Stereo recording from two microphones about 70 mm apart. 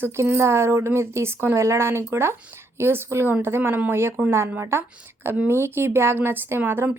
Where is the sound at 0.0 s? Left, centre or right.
Right.